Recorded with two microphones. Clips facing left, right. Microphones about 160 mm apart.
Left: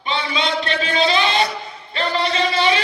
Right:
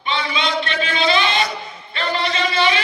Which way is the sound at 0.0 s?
35° left (ahead or behind).